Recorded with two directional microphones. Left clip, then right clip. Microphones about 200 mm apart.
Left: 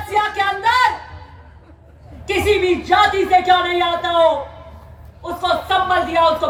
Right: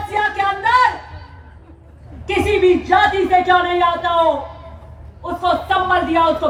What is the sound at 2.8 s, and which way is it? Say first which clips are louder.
Speech: even; 50° left (ahead or behind).